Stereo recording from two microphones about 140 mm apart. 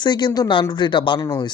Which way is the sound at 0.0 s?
30° left (ahead or behind).